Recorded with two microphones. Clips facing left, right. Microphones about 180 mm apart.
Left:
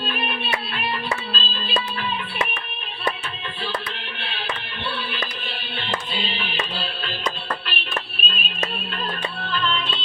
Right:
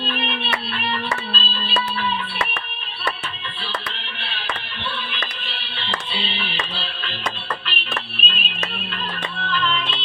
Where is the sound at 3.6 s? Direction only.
45° left (ahead or behind).